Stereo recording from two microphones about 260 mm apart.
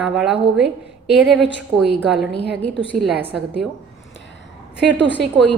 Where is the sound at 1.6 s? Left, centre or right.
Centre.